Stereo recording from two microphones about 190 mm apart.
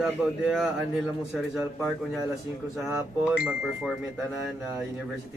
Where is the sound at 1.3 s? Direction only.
5° right (ahead or behind).